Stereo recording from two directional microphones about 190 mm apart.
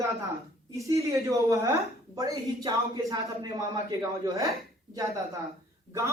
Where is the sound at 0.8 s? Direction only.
15° right (ahead or behind).